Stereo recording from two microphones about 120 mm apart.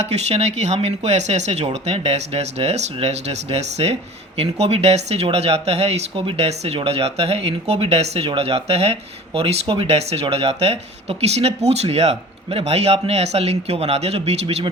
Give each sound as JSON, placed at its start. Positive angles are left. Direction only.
{"t": 0.0, "sound": "speech", "side_deg": -65}